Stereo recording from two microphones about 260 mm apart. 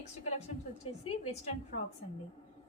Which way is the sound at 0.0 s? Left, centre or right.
Left.